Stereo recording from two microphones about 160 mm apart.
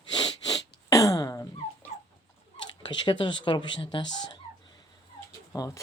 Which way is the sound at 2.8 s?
30° left (ahead or behind).